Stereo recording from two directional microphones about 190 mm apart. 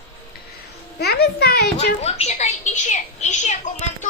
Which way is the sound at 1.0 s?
55° left (ahead or behind).